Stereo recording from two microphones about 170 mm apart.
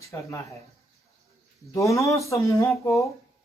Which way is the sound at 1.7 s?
20° left (ahead or behind).